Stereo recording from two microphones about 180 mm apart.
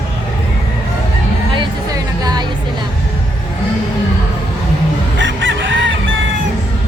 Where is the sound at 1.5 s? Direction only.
25° right (ahead or behind).